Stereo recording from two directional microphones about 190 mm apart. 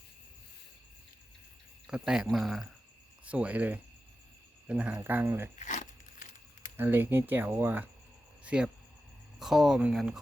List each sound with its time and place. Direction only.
1.9 s speech: 5° right (ahead or behind)
5.5 s a sound: 40° left (ahead or behind)
6.7 s speech: 10° right (ahead or behind)